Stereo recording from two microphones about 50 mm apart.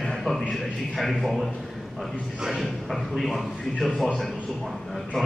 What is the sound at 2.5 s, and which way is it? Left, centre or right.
A man's voice, centre.